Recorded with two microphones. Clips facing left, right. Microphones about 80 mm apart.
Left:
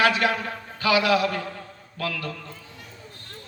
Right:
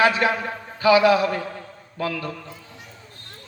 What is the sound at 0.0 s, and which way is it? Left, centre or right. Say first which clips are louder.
A man's voice: right 2 dB; right.